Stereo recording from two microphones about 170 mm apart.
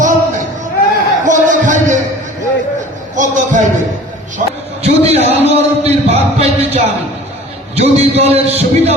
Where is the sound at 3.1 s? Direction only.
50° right (ahead or behind).